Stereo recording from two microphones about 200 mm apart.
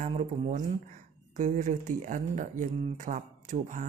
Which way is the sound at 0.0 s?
35° right (ahead or behind).